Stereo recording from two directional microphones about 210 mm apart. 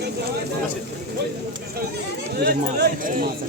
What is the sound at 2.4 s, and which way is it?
Speech, 45° right (ahead or behind).